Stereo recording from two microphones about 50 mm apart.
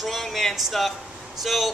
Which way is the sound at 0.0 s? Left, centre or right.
Centre.